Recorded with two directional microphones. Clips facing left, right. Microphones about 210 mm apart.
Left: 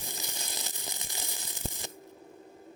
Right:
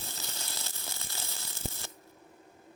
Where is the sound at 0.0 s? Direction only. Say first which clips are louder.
Left 2 dB; 15° left (ahead or behind).